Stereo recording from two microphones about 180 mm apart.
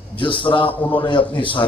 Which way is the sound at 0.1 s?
30° left (ahead or behind).